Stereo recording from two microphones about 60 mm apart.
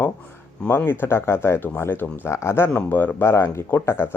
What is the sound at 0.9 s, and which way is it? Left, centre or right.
Speech, left.